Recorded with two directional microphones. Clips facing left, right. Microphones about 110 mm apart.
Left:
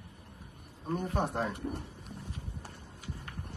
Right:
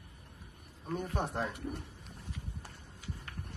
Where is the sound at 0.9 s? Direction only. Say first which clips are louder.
Left 3 dB; 20° left (ahead or behind).